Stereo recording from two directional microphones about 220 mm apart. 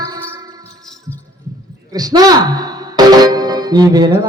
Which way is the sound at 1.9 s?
15° right (ahead or behind).